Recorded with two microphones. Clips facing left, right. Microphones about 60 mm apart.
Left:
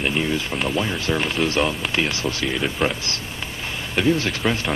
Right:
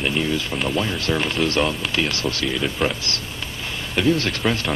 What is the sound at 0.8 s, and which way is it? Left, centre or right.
Speech, centre.